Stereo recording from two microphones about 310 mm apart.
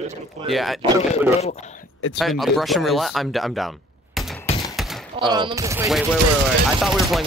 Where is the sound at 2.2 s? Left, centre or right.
Centre.